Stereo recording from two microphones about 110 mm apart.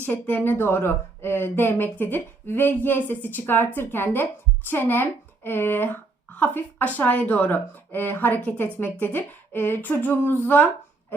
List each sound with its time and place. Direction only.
0.0 s speech: 15° left (ahead or behind)